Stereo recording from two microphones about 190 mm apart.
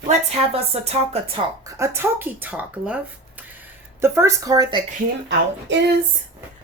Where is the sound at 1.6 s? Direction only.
15° right (ahead or behind).